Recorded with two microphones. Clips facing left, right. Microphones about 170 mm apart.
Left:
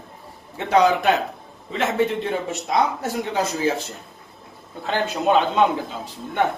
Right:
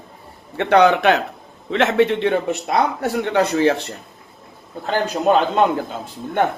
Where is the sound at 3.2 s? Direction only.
65° right (ahead or behind).